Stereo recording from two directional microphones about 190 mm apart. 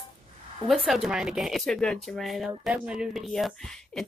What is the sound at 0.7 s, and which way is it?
Speech, centre (ahead or behind).